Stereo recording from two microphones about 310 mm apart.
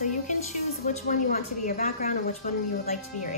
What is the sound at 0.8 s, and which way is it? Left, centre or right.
Speech, left.